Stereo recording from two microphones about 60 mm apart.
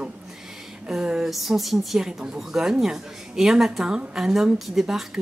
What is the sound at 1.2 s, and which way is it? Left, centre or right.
Speech, centre.